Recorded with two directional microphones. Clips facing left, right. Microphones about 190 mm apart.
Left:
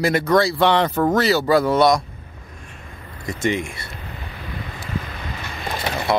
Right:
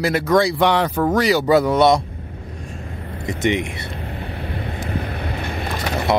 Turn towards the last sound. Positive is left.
turn(degrees=-20)  # may be behind; listen again after turning